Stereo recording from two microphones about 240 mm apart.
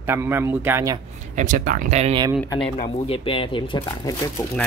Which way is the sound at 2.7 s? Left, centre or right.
Left.